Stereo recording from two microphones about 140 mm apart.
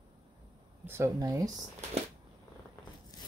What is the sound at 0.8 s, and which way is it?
Speech, 20° right (ahead or behind).